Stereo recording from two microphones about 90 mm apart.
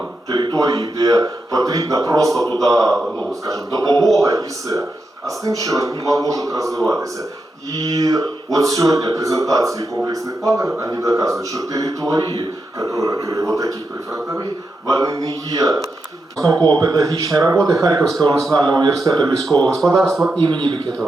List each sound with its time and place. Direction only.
0.3 s a man's voice: 50° right (ahead or behind)
18.5 s speech: 55° right (ahead or behind)
19.5 s speech: 10° left (ahead or behind)
20.4 s speech: 65° right (ahead or behind)